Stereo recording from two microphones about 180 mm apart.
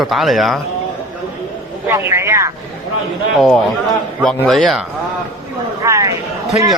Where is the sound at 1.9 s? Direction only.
15° right (ahead or behind).